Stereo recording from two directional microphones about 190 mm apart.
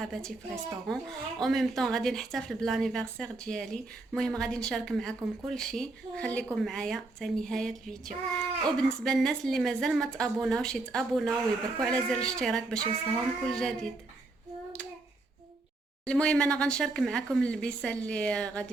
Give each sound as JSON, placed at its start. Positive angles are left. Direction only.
{"t": 0.0, "sound": "a woman's voice", "side_deg": 0}
{"t": 16.0, "sound": "a woman's voice", "side_deg": 5}